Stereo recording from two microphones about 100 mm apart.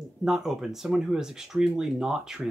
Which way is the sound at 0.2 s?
5° right (ahead or behind).